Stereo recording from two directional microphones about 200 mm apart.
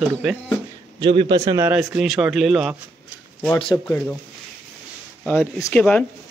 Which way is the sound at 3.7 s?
10° left (ahead or behind).